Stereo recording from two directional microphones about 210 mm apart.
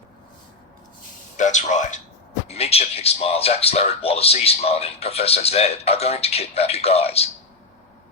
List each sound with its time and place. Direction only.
1.4 s speech: 35° left (ahead or behind)